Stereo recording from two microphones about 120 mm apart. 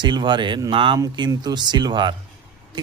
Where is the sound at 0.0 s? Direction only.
40° right (ahead or behind).